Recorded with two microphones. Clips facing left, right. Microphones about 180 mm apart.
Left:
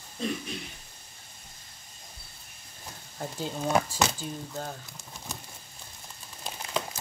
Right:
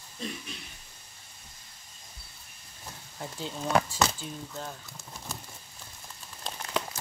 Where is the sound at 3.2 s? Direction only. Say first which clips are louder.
Left 3 dB; 45° left (ahead or behind).